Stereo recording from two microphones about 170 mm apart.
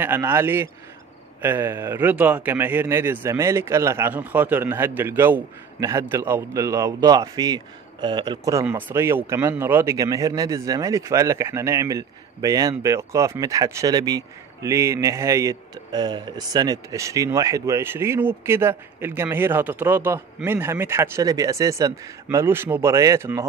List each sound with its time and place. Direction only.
0.0 s speech: 15° right (ahead or behind)
8.6 s speech: 10° right (ahead or behind)